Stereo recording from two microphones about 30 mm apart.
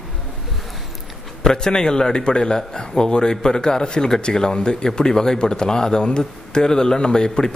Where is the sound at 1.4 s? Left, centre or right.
Left.